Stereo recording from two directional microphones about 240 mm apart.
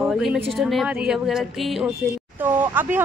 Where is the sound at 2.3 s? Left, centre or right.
Centre.